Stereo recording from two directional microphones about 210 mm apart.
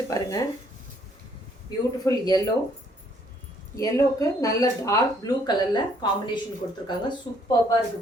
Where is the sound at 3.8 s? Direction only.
15° left (ahead or behind).